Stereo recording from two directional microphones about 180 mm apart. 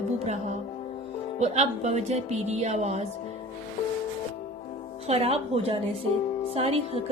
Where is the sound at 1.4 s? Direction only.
40° right (ahead or behind).